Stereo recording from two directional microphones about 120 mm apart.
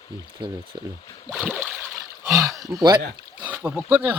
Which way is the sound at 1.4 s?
15° right (ahead or behind).